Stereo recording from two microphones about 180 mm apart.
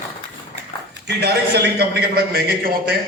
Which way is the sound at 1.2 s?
65° right (ahead or behind).